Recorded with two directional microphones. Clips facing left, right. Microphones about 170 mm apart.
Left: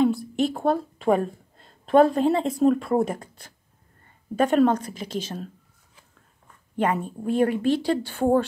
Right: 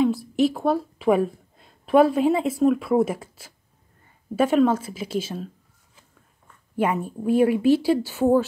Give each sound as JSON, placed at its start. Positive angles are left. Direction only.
{"t": 0.0, "sound": "a woman's voice", "side_deg": 0}
{"t": 6.8, "sound": "speech", "side_deg": -10}